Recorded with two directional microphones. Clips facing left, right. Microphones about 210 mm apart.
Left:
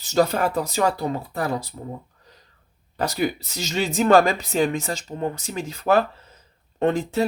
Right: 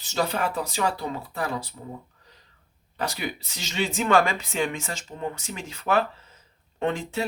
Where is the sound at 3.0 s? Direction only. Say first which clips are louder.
Left 7 dB; 40° left (ahead or behind).